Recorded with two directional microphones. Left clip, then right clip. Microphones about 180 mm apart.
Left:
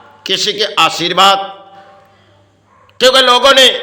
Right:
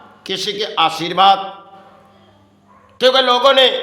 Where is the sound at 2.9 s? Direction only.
20° left (ahead or behind).